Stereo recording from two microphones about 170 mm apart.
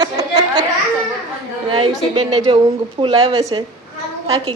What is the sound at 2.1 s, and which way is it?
A woman's voice, 30° right (ahead or behind).